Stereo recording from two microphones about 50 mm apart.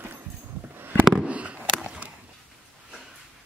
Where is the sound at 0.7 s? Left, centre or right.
Right.